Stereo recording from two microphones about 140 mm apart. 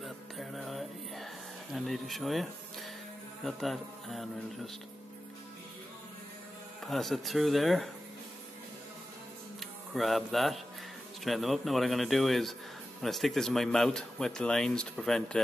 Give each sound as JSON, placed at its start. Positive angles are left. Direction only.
{"t": 0.0, "sound": "music", "side_deg": 0}
{"t": 3.4, "sound": "speech", "side_deg": 0}
{"t": 6.8, "sound": "speech", "side_deg": 0}
{"t": 9.6, "sound": "speech", "side_deg": 0}